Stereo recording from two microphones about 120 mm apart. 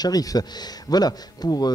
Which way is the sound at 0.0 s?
30° left (ahead or behind).